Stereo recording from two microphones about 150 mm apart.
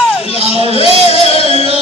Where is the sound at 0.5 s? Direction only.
40° left (ahead or behind).